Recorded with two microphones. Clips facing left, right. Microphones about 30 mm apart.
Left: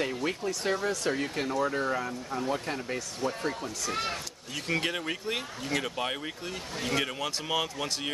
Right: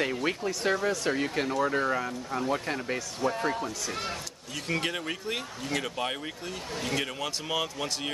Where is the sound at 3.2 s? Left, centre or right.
Right.